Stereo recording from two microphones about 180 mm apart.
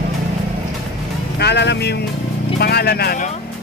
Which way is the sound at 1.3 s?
70° left (ahead or behind).